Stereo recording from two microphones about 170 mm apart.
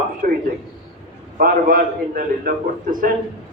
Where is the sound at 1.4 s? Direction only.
55° right (ahead or behind).